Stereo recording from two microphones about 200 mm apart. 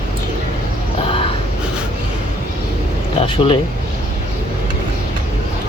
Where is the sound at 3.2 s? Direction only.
25° left (ahead or behind).